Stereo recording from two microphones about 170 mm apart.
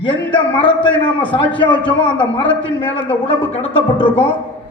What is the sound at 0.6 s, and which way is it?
Speech, 90° left.